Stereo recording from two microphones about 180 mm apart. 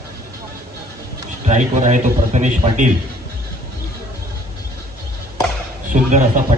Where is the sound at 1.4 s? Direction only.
40° right (ahead or behind).